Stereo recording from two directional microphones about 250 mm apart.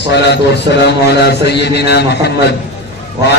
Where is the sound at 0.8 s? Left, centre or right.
Left.